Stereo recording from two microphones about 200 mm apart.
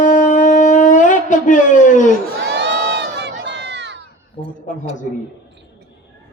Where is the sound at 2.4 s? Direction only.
60° right (ahead or behind).